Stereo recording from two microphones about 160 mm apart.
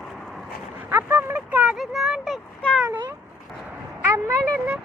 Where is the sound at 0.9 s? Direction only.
15° right (ahead or behind); by 2.8 s 5° left (ahead or behind).